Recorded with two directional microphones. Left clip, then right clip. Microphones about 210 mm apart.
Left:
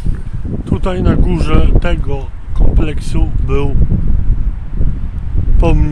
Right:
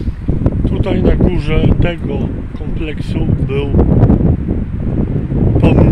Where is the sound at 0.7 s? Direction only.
10° left (ahead or behind).